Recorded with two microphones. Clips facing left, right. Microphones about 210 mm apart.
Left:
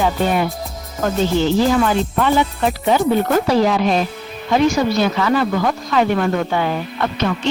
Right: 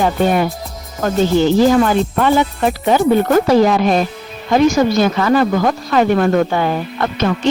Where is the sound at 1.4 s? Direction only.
45° right (ahead or behind).